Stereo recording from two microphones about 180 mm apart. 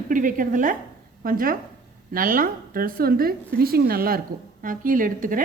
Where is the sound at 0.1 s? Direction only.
50° right (ahead or behind).